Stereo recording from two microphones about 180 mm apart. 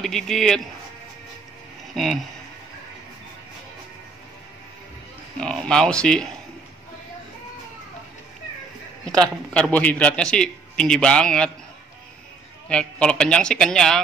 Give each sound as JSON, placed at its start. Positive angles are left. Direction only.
{"t": 0.0, "sound": "a man's voice", "side_deg": 0}
{"t": 5.4, "sound": "a man's voice", "side_deg": 5}
{"t": 9.0, "sound": "a man's voice", "side_deg": 5}
{"t": 12.6, "sound": "a man's voice", "side_deg": 5}